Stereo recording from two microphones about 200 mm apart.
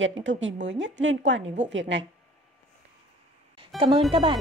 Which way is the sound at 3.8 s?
25° right (ahead or behind).